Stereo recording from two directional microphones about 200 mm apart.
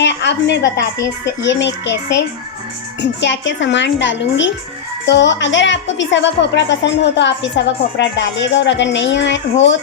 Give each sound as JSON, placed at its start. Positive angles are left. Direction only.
{"t": 0.0, "sound": "a woman's voice", "side_deg": 60}